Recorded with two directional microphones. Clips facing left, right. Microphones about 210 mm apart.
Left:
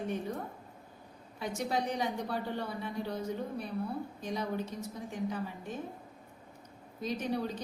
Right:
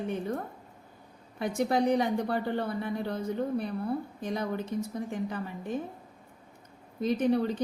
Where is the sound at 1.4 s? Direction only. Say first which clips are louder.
Right 7 dB; 55° right (ahead or behind).